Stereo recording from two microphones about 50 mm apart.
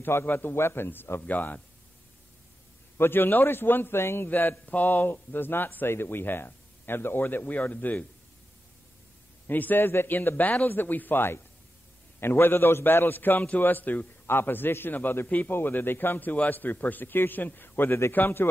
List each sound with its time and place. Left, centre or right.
0.0 s a man's voice: left
1.2 s speech: left
3.0 s a man's voice: left
4.3 s speech: left
9.5 s a man's voice: left